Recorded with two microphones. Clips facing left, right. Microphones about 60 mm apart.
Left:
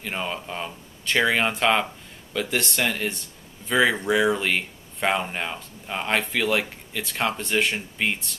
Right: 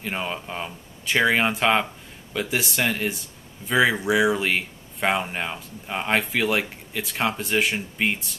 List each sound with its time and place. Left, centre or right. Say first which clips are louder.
0.0 s speech: right 1 dB; centre